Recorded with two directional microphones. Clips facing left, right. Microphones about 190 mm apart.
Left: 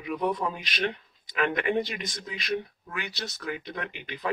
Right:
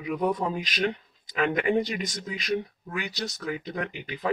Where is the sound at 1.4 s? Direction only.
35° right (ahead or behind).